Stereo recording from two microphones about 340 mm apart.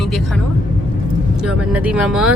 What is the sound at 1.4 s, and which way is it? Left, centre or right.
Speech, centre.